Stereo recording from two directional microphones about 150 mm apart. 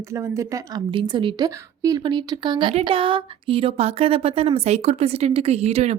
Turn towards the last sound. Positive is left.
turn(degrees=-45)  # may be behind; listen again after turning